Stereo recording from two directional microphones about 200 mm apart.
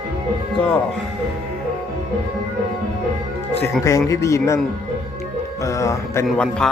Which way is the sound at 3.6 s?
15° left (ahead or behind).